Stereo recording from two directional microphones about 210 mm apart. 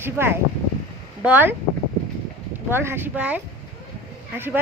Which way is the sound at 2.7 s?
10° right (ahead or behind).